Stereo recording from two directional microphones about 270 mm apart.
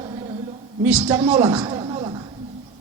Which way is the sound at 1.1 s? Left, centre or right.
Centre.